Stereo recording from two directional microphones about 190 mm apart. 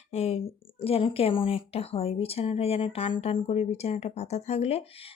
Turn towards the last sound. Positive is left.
turn(degrees=35)  # may be behind; listen again after turning